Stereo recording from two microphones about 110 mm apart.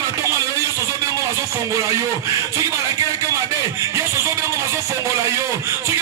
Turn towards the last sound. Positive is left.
turn(degrees=-25)  # may be behind; listen again after turning